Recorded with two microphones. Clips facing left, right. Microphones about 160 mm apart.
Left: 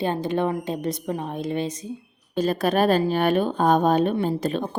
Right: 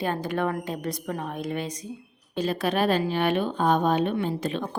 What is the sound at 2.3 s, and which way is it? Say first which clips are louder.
A woman's voice: left 4 dB; 45° left (ahead or behind).